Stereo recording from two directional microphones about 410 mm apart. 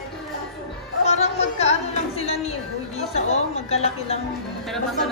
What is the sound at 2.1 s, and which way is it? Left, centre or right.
Speech, centre.